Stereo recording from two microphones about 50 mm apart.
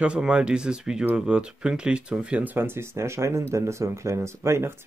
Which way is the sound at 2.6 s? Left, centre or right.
Right.